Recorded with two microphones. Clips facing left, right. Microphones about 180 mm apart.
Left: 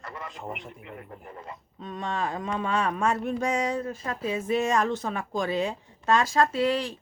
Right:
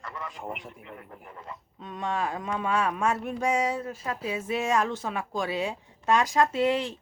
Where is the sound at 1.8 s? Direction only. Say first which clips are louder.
Even; 10° right (ahead or behind).